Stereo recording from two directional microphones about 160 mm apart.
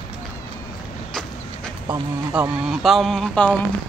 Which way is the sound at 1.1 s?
5° left (ahead or behind).